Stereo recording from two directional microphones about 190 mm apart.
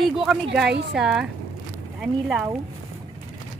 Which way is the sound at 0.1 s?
Centre (ahead or behind).